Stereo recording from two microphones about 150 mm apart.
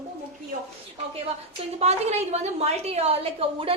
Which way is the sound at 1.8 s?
45° right (ahead or behind).